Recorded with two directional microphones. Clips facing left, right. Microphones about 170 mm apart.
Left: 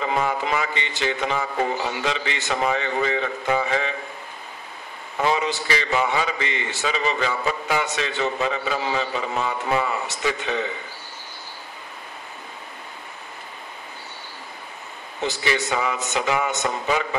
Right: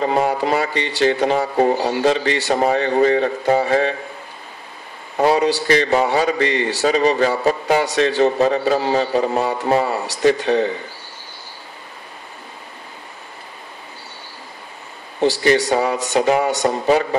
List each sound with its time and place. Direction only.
0.0 s speech: 40° right (ahead or behind)
5.1 s speech: 40° right (ahead or behind)
15.1 s speech: 35° right (ahead or behind)